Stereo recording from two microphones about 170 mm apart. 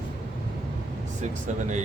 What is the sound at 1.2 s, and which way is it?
Speech, 45° right (ahead or behind).